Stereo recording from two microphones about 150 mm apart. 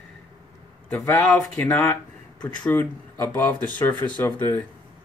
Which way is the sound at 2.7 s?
15° left (ahead or behind).